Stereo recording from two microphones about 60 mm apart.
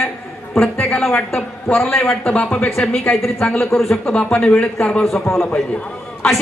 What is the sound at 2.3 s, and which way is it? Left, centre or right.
Speech, left.